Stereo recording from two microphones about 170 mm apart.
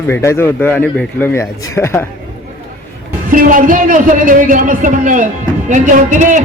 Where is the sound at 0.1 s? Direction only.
15° left (ahead or behind).